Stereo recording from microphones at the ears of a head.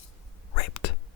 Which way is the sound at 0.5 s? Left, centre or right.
Left.